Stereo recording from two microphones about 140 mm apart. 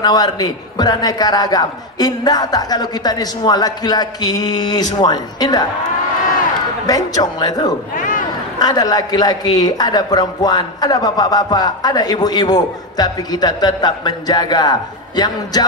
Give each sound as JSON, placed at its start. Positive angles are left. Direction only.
{"t": 0.0, "sound": "a man's voice", "side_deg": 30}
{"t": 6.9, "sound": "a man's voice", "side_deg": 25}
{"t": 7.9, "sound": "a sound", "side_deg": 70}
{"t": 8.5, "sound": "a man's voice", "side_deg": 25}